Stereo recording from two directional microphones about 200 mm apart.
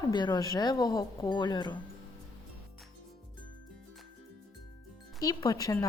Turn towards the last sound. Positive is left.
turn(degrees=15)  # may be behind; listen again after turning